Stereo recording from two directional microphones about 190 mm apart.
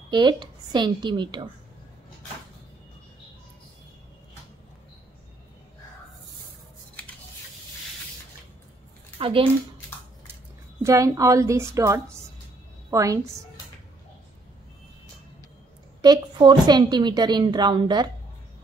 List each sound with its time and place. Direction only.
0.1 s a woman's voice: 25° right (ahead or behind)
9.2 s speech: 30° right (ahead or behind)
10.8 s a woman's voice: 15° right (ahead or behind)
16.0 s a woman's voice: 20° right (ahead or behind)